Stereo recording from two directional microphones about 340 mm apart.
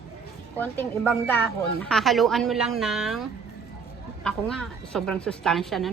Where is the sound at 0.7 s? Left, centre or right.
Centre.